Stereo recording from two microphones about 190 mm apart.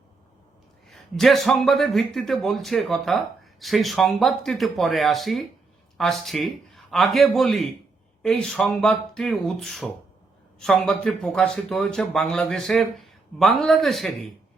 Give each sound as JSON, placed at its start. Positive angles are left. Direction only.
{"t": 0.9, "sound": "a man's voice", "side_deg": 0}